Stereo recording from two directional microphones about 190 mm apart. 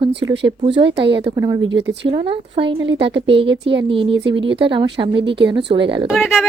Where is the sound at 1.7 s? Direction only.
65° right (ahead or behind).